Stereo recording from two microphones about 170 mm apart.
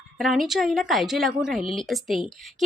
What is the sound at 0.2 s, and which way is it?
A woman's voice, centre (ahead or behind).